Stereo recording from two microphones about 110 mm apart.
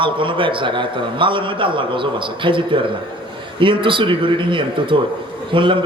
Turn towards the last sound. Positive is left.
turn(degrees=-50)  # may be behind; listen again after turning